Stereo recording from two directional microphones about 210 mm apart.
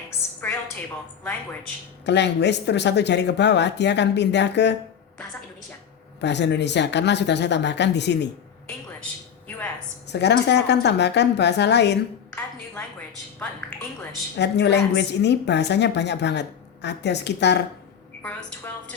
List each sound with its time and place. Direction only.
2.0 s a woman's voice: 55° left (ahead or behind)
6.2 s a woman's voice: 55° left (ahead or behind)
10.1 s a woman's voice: 55° left (ahead or behind)
14.3 s a woman's voice: 55° left (ahead or behind)
18.2 s a woman's voice: 5° left (ahead or behind)